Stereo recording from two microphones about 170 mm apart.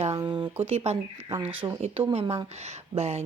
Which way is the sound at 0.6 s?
35° right (ahead or behind).